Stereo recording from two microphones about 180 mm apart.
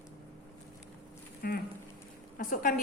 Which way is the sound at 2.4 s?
50° left (ahead or behind).